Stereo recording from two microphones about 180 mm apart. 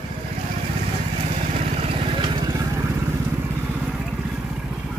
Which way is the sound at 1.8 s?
25° right (ahead or behind).